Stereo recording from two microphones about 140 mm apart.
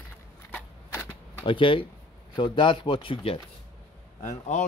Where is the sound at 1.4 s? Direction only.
35° left (ahead or behind).